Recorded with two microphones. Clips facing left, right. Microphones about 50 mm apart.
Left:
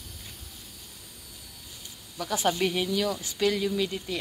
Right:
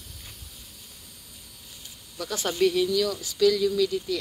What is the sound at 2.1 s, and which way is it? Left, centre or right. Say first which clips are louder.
Speech: even; centre.